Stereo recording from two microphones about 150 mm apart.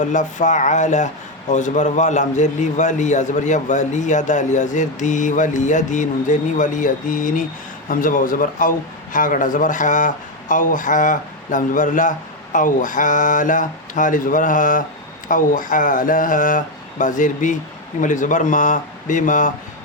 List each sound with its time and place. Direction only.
0.0 s speech: 55° left (ahead or behind)